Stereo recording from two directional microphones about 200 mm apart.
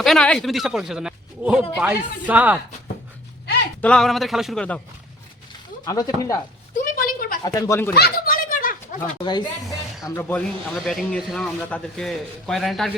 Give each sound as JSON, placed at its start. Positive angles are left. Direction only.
{"t": 0.0, "sound": "speech", "side_deg": 5}
{"t": 3.8, "sound": "speech", "side_deg": 5}
{"t": 5.8, "sound": "speech", "side_deg": 15}
{"t": 6.7, "sound": "a sound", "side_deg": 45}
{"t": 7.4, "sound": "speech", "side_deg": 15}
{"t": 7.9, "sound": "a sound", "side_deg": 50}
{"t": 9.2, "sound": "speech", "side_deg": 20}
{"t": 10.2, "sound": "speech", "side_deg": 10}